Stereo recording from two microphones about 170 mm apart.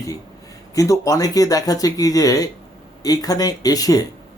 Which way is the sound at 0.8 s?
20° left (ahead or behind).